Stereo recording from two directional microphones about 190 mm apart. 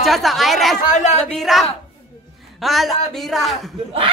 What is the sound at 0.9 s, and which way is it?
Speech, 35° left (ahead or behind).